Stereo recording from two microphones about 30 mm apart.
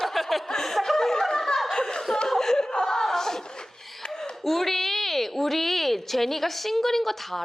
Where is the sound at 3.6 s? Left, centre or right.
Centre.